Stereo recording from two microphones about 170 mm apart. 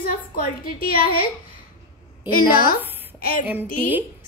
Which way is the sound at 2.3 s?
60° left (ahead or behind).